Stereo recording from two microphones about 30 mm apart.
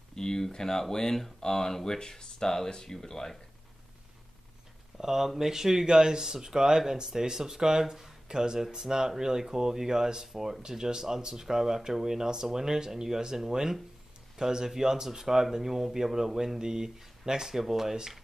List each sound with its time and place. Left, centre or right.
0.1 s speech: centre
4.9 s speech: centre
8.3 s speech: right
10.2 s speech: centre
10.6 s speech: right
16.5 s speech: right